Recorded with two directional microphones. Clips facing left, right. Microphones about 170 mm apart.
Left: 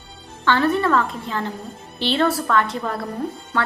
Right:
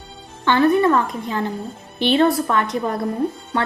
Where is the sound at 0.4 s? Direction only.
15° right (ahead or behind).